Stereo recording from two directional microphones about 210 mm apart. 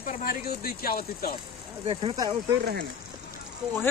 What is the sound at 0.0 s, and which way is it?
Stir, 45° left (ahead or behind).